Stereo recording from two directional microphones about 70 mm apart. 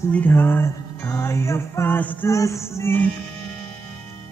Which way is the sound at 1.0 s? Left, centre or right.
Left.